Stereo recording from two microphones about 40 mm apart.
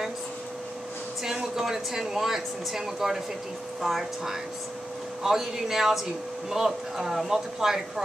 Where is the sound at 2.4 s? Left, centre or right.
Centre.